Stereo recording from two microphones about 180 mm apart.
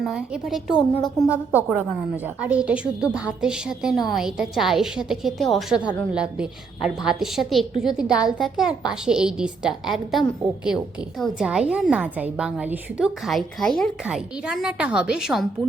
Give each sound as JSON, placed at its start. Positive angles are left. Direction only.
{"t": 0.0, "sound": "a woman's voice", "side_deg": 0}
{"t": 0.7, "sound": "a woman's voice", "side_deg": 25}
{"t": 2.2, "sound": "a woman's voice", "side_deg": -10}